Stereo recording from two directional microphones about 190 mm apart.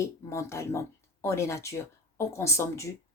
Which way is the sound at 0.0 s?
15° left (ahead or behind).